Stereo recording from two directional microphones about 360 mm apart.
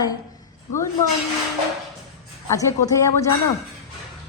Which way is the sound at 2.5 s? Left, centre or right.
Centre.